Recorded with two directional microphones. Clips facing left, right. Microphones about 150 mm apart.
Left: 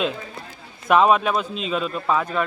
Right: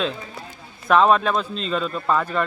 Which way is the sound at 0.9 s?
5° left (ahead or behind).